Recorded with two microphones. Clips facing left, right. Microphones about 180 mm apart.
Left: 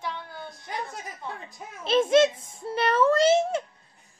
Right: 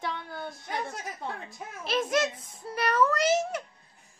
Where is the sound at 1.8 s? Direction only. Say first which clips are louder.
Left 8 dB; 25° left (ahead or behind).